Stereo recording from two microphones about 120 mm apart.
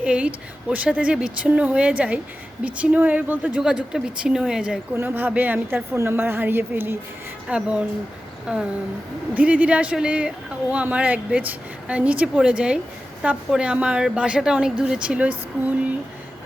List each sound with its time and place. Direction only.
0.0 s speech: 10° right (ahead or behind)
8.5 s a sound: 5° right (ahead or behind)
9.3 s speech: 10° right (ahead or behind)